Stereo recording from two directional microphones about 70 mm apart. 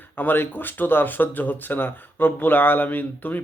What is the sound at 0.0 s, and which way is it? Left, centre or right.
Speech, left.